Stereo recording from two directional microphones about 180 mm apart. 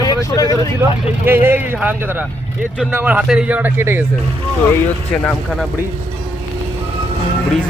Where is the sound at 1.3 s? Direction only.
10° right (ahead or behind).